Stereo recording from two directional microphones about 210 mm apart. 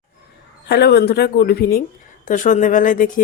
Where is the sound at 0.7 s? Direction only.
50° left (ahead or behind).